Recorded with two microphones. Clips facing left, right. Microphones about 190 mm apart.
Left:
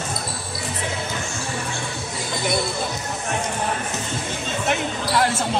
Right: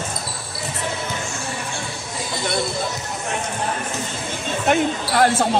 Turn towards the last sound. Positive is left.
turn(degrees=-55)  # may be behind; listen again after turning